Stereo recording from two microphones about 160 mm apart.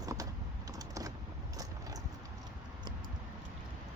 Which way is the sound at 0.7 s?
20° right (ahead or behind).